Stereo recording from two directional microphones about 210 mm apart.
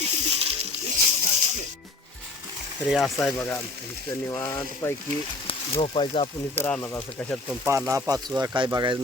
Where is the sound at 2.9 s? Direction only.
Centre (ahead or behind).